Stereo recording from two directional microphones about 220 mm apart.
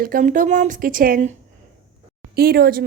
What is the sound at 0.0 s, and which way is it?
Speech, 40° right (ahead or behind).